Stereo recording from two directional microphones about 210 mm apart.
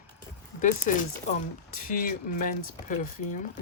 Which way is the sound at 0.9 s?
40° left (ahead or behind).